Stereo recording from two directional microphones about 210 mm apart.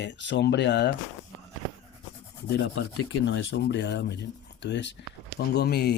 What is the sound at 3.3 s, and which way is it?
Speech, 55° left (ahead or behind).